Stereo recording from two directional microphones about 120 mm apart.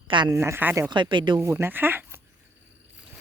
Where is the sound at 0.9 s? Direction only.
40° right (ahead or behind).